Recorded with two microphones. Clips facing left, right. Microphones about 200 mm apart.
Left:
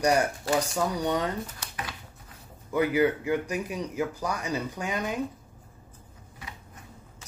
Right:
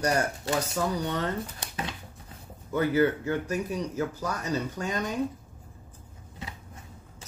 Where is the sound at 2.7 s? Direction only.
15° left (ahead or behind).